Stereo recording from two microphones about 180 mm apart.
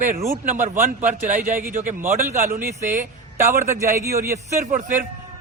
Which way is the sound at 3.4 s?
15° right (ahead or behind).